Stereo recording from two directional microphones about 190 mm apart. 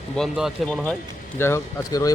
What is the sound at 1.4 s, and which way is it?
Speech, 15° left (ahead or behind).